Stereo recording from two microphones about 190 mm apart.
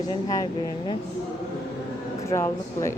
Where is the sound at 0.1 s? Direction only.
20° left (ahead or behind).